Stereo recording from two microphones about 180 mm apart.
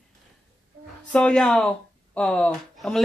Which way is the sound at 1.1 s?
5° left (ahead or behind).